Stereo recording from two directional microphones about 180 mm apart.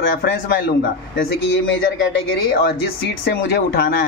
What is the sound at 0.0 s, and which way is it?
Speech, 60° left (ahead or behind).